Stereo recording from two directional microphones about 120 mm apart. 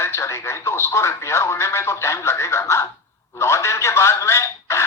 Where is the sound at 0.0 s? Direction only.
20° left (ahead or behind).